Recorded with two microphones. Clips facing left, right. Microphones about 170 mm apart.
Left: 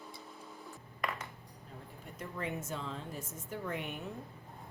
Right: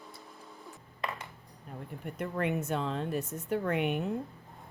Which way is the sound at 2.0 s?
65° right (ahead or behind).